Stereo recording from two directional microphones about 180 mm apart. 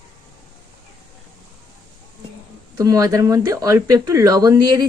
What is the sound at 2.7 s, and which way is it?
Speech, 20° right (ahead or behind).